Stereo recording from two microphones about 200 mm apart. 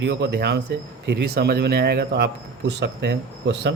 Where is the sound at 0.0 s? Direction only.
60° right (ahead or behind).